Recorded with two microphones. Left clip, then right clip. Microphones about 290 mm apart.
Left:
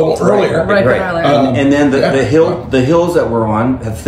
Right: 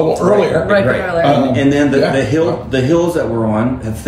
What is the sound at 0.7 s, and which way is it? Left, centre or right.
Speech, centre.